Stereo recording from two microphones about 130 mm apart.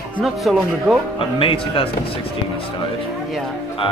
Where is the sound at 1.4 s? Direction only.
45° left (ahead or behind).